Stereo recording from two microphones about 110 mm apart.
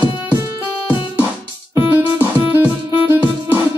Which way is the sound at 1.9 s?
20° right (ahead or behind).